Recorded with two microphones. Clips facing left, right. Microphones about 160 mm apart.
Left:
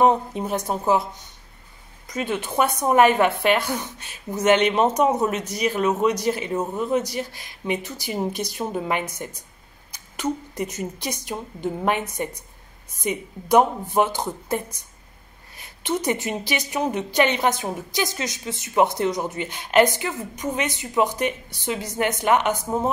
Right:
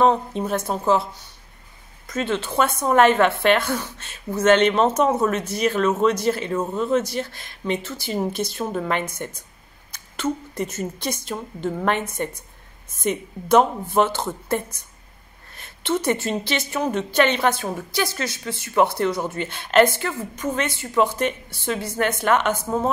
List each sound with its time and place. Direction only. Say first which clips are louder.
0.0 s a woman's voice: even; 15° left (ahead or behind)
2.0 s a woman's voice: right 2 dB; 15° left (ahead or behind)